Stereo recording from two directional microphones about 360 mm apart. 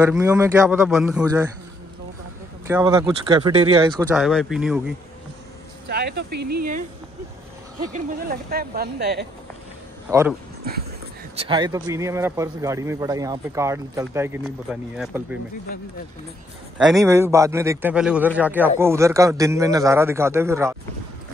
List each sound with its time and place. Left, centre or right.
0.0 s a man's voice: centre
2.7 s a man's voice: centre
4.2 s a man's voice: centre
5.9 s speech: right
7.9 s speech: right
11.3 s a man's voice: centre
16.7 s a man's voice: centre